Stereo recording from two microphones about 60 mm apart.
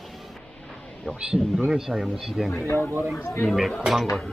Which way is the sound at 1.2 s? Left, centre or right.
Centre.